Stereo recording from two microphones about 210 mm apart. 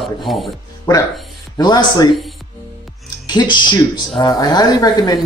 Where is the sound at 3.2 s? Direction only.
20° left (ahead or behind).